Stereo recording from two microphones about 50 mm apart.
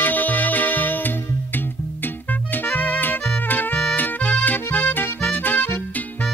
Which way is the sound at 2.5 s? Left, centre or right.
Left.